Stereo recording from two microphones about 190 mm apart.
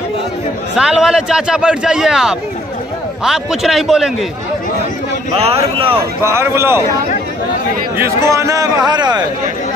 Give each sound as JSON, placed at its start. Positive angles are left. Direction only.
{"t": 0.7, "sound": "a man's voice", "side_deg": -5}
{"t": 5.4, "sound": "a man's voice", "side_deg": -30}
{"t": 5.9, "sound": "a man's voice", "side_deg": -15}
{"t": 8.0, "sound": "a man's voice", "side_deg": -15}